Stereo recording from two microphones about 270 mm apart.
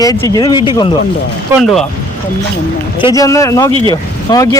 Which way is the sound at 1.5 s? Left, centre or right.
Centre.